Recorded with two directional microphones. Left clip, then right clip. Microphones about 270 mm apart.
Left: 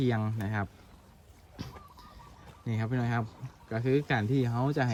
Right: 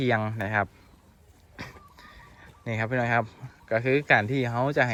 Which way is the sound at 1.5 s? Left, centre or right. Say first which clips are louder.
Right 4 dB; centre.